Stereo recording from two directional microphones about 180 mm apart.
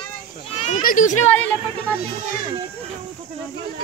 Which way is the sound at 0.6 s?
40° left (ahead or behind).